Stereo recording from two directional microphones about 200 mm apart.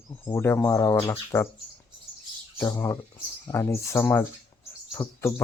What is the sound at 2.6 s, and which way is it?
Speech, 15° left (ahead or behind).